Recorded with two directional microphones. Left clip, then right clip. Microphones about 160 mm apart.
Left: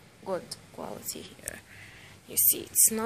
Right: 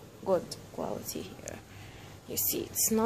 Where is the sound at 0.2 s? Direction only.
Centre (ahead or behind).